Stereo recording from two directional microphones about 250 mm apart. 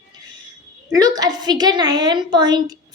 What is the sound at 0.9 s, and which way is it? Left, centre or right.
A woman's voice, centre.